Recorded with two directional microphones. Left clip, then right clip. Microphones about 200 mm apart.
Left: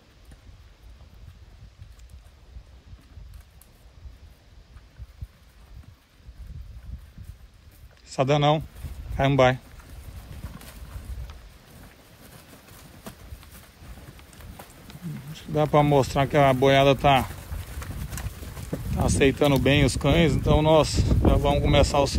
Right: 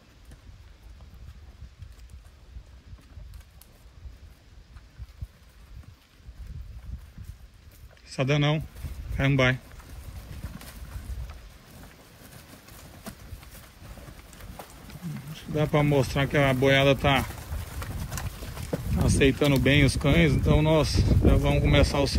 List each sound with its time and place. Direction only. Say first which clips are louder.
8.0 s speech: left 5 dB; 10° left (ahead or behind)
15.3 s speech: left 5 dB; 10° left (ahead or behind)
18.7 s a sound: right 2 dB; 20° right (ahead or behind)
19.0 s speech: left 2 dB; 5° left (ahead or behind)